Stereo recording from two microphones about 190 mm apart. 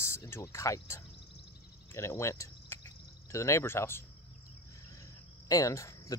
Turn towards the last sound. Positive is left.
turn(degrees=15)  # may be behind; listen again after turning